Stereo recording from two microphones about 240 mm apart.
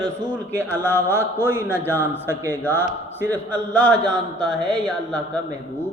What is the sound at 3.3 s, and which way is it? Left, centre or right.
A man's voice, centre.